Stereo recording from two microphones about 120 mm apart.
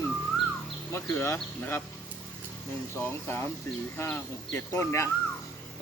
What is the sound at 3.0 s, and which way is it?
Speech, 20° left (ahead or behind).